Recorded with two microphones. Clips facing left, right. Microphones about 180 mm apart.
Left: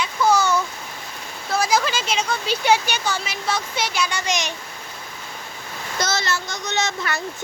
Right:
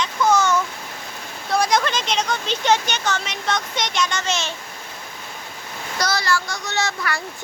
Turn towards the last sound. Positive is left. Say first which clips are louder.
# even
turn(degrees=20)  # may be behind; listen again after turning